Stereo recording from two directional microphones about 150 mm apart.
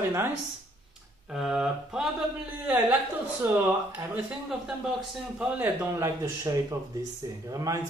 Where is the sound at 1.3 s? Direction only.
Centre (ahead or behind).